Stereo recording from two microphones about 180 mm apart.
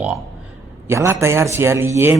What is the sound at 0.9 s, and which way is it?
Speech, 15° right (ahead or behind).